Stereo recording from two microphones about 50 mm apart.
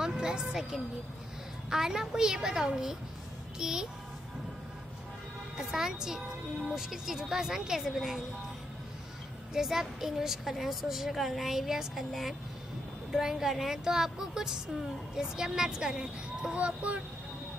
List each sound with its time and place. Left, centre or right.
0.0 s music: centre
1.7 s speech: centre
5.6 s speech: centre
9.5 s a woman's voice: centre
16.5 s speech: right